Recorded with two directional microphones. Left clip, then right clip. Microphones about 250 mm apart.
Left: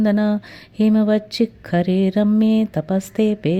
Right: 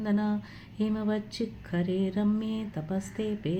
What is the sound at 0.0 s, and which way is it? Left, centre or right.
Speech, left.